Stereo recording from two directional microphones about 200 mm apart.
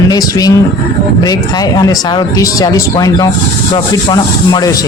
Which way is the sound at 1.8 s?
20° left (ahead or behind).